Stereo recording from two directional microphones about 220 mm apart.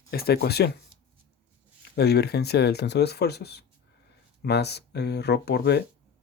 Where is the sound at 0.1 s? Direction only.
45° left (ahead or behind).